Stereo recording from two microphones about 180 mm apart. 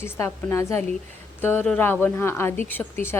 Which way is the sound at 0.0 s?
15° left (ahead or behind).